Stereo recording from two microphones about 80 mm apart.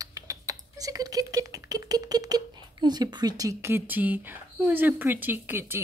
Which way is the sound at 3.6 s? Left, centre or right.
Right.